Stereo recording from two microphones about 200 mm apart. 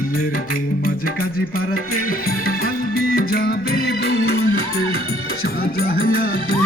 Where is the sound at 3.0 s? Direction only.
50° left (ahead or behind).